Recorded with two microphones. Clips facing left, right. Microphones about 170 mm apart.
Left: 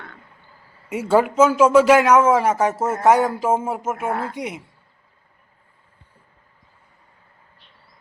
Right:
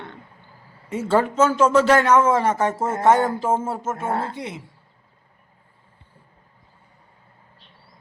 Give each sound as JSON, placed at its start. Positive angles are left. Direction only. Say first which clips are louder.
{"t": 0.9, "sound": "a man's voice", "louder": "left 2 dB", "side_deg": 10}
{"t": 3.9, "sound": "speech", "louder": "even", "side_deg": -30}
{"t": 4.4, "sound": "a man's voice", "louder": "left 3 dB", "side_deg": 15}